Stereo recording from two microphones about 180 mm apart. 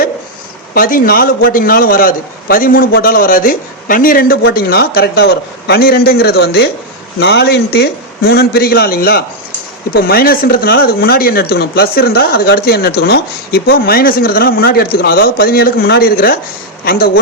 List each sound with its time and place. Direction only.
0.7 s a man's voice: 55° left (ahead or behind)